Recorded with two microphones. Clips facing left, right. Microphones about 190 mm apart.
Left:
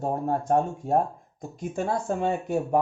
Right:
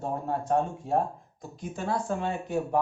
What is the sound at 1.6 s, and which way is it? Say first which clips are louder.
Speech: left 3 dB; 50° left (ahead or behind).